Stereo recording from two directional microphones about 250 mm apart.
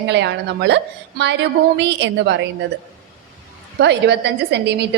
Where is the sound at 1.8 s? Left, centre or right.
Right.